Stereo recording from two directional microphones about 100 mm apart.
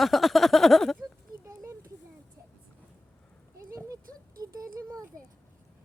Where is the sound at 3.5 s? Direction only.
30° right (ahead or behind).